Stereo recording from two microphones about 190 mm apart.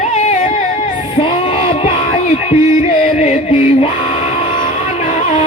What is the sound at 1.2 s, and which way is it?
Music, 30° left (ahead or behind).